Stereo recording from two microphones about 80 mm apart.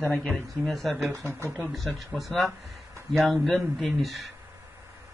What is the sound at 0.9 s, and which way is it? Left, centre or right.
Speech, right.